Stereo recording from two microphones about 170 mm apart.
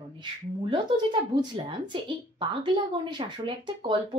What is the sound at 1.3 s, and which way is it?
Speech, 25° right (ahead or behind).